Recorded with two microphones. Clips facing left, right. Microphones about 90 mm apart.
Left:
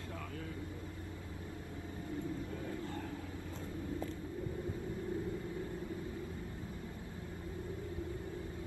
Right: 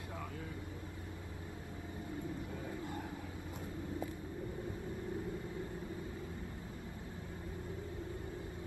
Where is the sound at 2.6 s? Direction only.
15° right (ahead or behind).